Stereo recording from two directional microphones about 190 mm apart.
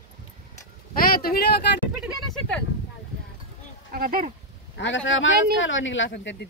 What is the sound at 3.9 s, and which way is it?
Speech, 50° right (ahead or behind).